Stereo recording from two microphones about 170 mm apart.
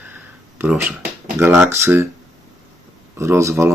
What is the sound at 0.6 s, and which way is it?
Speech, 5° right (ahead or behind).